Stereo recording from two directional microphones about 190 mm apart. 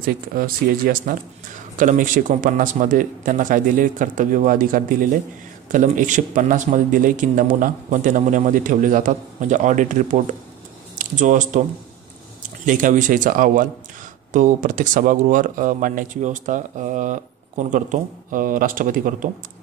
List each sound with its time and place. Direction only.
0.0 s speech: 50° right (ahead or behind)
12.6 s speech: 45° right (ahead or behind)